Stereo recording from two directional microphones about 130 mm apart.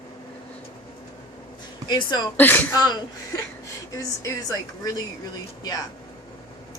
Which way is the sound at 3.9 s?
25° left (ahead or behind).